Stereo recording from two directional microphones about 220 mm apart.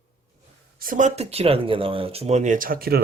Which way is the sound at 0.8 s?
35° right (ahead or behind).